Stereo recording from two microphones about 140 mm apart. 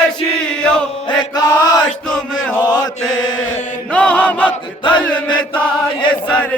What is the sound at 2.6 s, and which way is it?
Mantra, 30° left (ahead or behind).